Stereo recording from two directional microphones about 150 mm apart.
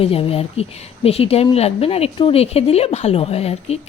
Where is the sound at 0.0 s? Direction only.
40° left (ahead or behind).